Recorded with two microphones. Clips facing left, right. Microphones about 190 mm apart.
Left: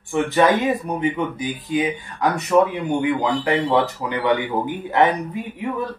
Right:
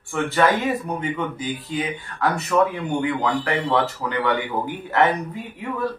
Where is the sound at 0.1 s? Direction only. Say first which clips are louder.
Left 3 dB; 20° left (ahead or behind).